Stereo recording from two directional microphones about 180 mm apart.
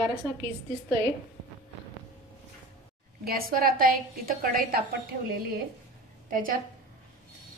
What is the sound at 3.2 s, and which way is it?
A woman's voice, 55° right (ahead or behind).